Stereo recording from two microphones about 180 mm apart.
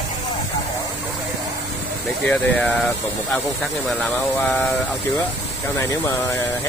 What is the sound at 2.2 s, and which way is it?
Speech, 5° left (ahead or behind).